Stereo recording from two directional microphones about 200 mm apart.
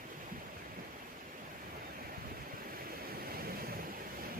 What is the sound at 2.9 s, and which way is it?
Waves, 50° right (ahead or behind).